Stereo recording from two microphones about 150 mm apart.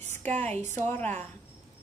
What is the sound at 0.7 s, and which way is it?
Speech, 15° left (ahead or behind).